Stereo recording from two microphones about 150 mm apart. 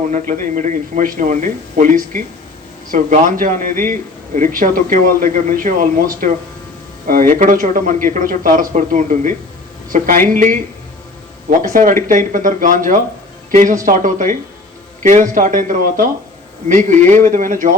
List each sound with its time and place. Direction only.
0.1 s speech: 55° right (ahead or behind)
11.6 s speech: 60° right (ahead or behind)